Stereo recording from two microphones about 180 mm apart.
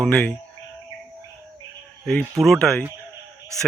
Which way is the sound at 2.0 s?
5° left (ahead or behind).